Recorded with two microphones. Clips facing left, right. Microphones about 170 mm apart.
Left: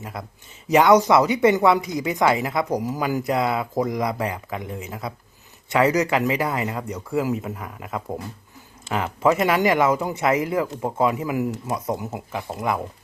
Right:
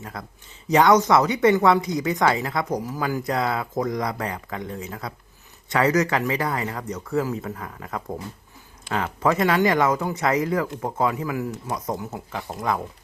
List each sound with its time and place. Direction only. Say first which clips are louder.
0.0 s speech: left 2 dB; 20° left (ahead or behind)
3.8 s speech: left 2 dB; 10° left (ahead or behind)